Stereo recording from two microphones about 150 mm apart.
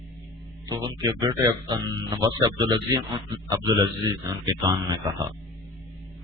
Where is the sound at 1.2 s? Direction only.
30° right (ahead or behind).